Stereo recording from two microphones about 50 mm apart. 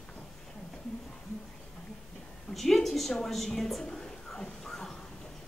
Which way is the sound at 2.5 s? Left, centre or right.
Centre.